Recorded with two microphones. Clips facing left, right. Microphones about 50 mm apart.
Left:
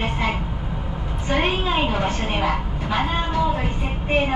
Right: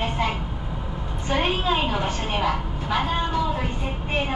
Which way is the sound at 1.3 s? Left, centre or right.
Centre.